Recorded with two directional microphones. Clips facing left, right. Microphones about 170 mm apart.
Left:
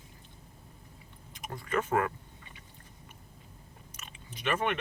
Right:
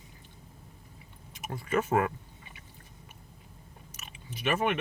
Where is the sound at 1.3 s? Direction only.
5° right (ahead or behind).